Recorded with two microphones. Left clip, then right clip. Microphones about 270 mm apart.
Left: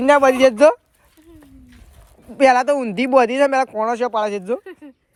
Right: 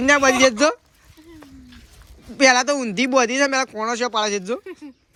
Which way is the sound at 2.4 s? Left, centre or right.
Centre.